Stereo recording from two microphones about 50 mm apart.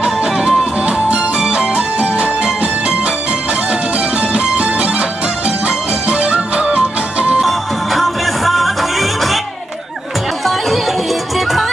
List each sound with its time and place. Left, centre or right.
0.0 s music: centre
4.2 s music: right
7.4 s music: centre
10.4 s music: centre